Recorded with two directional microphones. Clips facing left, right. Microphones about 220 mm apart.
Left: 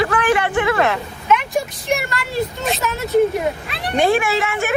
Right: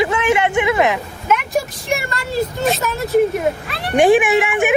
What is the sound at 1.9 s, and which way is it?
Speech, centre (ahead or behind).